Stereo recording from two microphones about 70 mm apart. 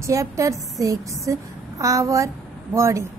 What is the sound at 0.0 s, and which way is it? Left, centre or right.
A woman's voice, right.